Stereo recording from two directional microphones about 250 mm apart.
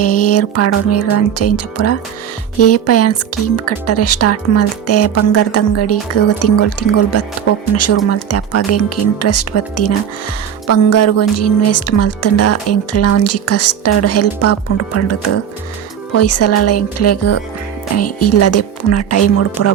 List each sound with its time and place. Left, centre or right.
0.0 s music: left
2.6 s speech: left
16.1 s speech: left